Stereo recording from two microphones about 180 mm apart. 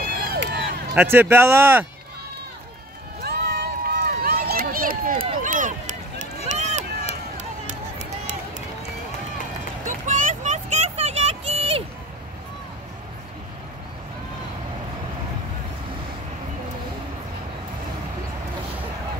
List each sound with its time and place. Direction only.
0.3 s run: 65° right (ahead or behind)
0.9 s speech: 10° right (ahead or behind)
3.3 s run: 65° right (ahead or behind); by 8.6 s 40° right (ahead or behind)
9.8 s vehicle: 45° right (ahead or behind)